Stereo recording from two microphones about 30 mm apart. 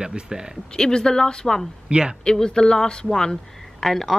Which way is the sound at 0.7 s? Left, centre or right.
Left.